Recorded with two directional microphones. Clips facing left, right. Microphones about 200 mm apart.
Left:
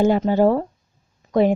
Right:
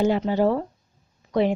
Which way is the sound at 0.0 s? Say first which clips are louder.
Left 4 dB; 45° left (ahead or behind).